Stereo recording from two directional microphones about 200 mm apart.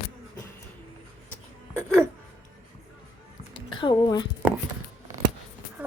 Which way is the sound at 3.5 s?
25° left (ahead or behind).